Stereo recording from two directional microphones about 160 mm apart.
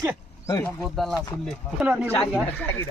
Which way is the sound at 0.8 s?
Centre (ahead or behind).